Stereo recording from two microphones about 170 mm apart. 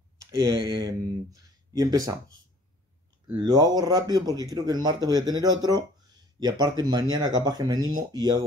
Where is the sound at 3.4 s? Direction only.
25° right (ahead or behind).